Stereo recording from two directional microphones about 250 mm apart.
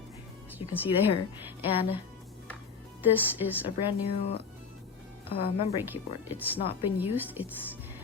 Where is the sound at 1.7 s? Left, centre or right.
Left.